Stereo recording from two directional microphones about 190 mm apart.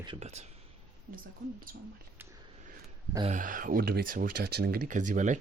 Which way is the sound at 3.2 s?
45° right (ahead or behind).